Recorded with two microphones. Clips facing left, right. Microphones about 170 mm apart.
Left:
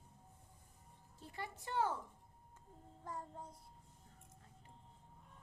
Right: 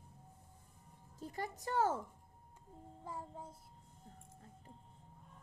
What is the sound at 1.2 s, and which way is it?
Speech, 40° right (ahead or behind).